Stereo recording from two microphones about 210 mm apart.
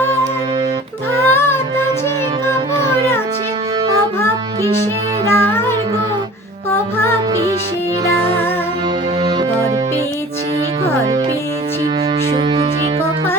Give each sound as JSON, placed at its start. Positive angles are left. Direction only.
{"t": 1.3, "sound": "child singing", "side_deg": 10}
{"t": 5.3, "sound": "music", "side_deg": 10}
{"t": 12.3, "sound": "music", "side_deg": -30}